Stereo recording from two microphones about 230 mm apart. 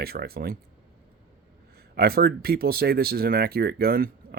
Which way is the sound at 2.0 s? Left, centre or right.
Right.